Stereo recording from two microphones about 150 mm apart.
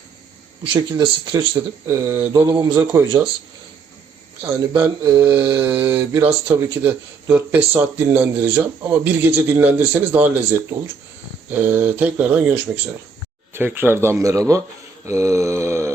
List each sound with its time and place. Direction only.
0.7 s speech: 30° right (ahead or behind)
2.4 s speech: 25° right (ahead or behind)
4.7 s mantra: 30° right (ahead or behind)
5.2 s speech: 10° right (ahead or behind)
15.0 s mantra: 20° right (ahead or behind)